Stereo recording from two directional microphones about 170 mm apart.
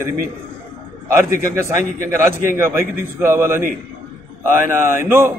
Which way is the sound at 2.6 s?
15° right (ahead or behind).